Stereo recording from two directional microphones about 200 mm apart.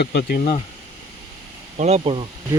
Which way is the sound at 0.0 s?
55° left (ahead or behind).